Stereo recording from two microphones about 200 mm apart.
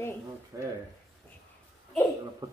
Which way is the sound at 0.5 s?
15° right (ahead or behind).